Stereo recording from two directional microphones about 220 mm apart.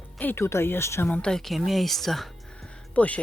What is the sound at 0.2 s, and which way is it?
Speech, 10° left (ahead or behind).